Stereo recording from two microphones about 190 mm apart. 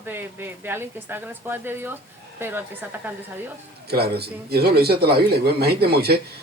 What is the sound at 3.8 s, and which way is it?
A man's voice, 55° right (ahead or behind).